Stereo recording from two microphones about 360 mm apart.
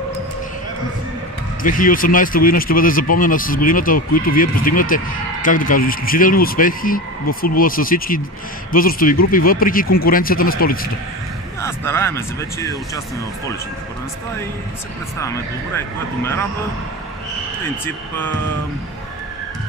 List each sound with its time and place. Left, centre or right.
1.6 s speech: left
11.6 s speech: centre
15.1 s speech: centre
17.8 s speech: centre